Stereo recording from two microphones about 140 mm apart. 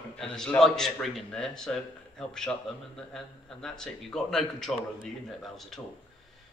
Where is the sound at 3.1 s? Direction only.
5° left (ahead or behind).